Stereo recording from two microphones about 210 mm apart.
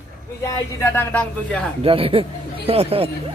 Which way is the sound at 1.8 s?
25° right (ahead or behind).